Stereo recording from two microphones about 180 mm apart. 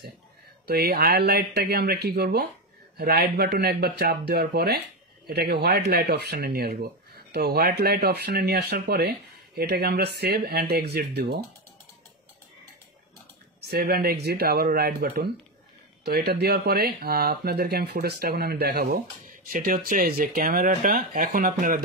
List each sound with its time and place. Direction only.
0.7 s speech: 60° right (ahead or behind)
13.7 s speech: 60° right (ahead or behind)